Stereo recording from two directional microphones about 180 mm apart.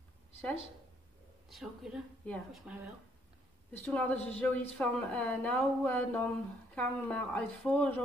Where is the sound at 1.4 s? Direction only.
Centre (ahead or behind).